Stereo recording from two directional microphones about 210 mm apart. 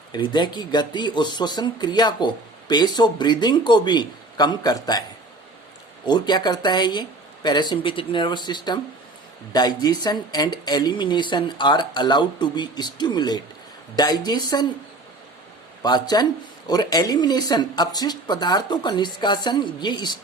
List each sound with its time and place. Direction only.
0.1 s speech: 20° left (ahead or behind)
6.1 s speech: 20° left (ahead or behind)
15.8 s speech: 20° left (ahead or behind)